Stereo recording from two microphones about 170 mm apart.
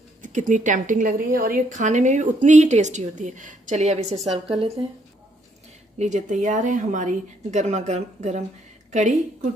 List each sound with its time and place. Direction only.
0.2 s a woman's voice: 45° right (ahead or behind)
5.9 s a woman's voice: 45° right (ahead or behind)